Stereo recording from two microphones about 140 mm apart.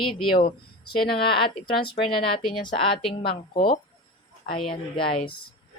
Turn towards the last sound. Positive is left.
turn(degrees=40)  # may be behind; listen again after turning